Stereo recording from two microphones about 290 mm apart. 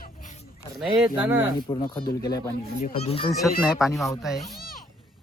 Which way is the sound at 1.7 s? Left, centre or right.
Centre.